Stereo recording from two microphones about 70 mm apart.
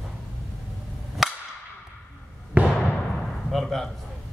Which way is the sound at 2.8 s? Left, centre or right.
Centre.